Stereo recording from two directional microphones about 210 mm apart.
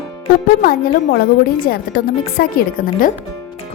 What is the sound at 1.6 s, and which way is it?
A woman's voice, 45° left (ahead or behind).